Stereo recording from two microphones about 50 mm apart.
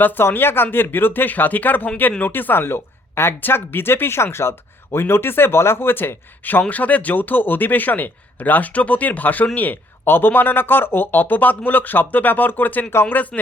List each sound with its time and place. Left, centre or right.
0.0 s speech: left
10.0 s speech: left